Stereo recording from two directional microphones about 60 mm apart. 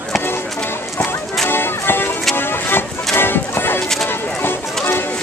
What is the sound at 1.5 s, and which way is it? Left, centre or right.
Music, left.